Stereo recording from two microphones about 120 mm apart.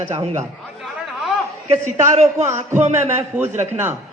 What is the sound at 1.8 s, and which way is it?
Speech, 70° right (ahead or behind).